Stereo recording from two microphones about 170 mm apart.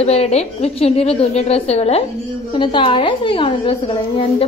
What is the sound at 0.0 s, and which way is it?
A woman's voice, 40° left (ahead or behind).